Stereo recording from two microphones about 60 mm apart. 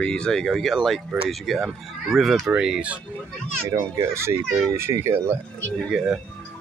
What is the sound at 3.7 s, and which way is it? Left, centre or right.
Speech, right.